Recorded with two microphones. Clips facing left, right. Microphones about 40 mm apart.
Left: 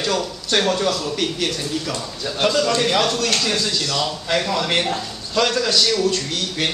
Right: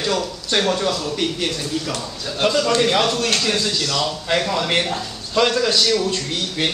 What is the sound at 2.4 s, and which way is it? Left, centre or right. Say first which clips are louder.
A man's voice: right 1 dB; centre.